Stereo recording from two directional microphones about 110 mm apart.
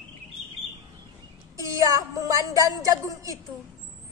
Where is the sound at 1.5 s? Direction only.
30° right (ahead or behind).